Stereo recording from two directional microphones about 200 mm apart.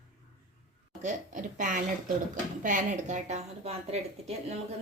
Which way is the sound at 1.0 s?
40° right (ahead or behind).